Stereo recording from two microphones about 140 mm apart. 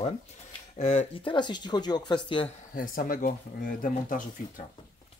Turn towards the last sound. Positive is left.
turn(degrees=75)  # may be behind; listen again after turning